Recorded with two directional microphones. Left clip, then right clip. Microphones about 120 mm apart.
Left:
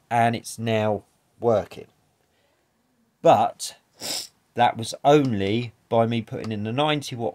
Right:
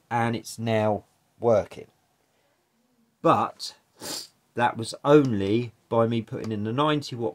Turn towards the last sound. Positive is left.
turn(degrees=40)  # may be behind; listen again after turning